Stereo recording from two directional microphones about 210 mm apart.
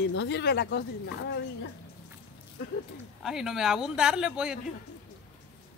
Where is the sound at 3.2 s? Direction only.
Centre (ahead or behind).